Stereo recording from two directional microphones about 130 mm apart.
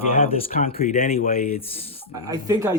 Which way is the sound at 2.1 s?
30° right (ahead or behind).